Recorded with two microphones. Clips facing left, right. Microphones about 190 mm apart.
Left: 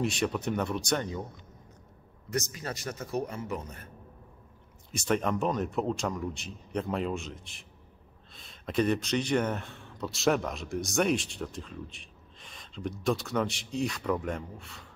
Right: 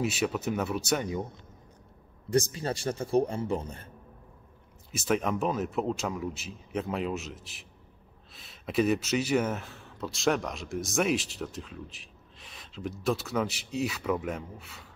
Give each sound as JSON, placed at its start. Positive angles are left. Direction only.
{"t": 0.0, "sound": "speech", "side_deg": -5}
{"t": 2.2, "sound": "a man's voice", "side_deg": -30}
{"t": 4.9, "sound": "speech", "side_deg": -5}